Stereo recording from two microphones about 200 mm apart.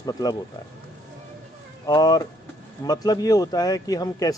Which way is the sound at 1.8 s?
20° left (ahead or behind).